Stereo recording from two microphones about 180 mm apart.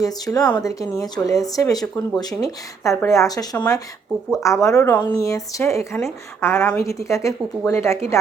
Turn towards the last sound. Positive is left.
turn(degrees=15)  # may be behind; listen again after turning